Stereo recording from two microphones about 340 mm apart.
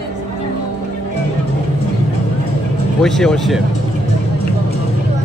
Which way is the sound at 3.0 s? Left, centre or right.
Centre.